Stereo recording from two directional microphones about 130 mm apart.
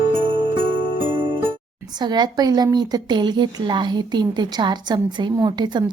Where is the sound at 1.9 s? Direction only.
35° right (ahead or behind).